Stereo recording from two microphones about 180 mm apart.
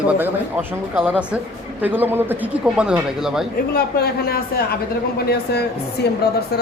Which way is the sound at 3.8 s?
60° left (ahead or behind).